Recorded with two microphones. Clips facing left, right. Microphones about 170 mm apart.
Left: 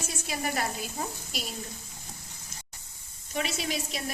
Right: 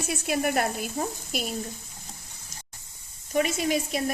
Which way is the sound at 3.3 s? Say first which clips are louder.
Right 7 dB; 45° right (ahead or behind).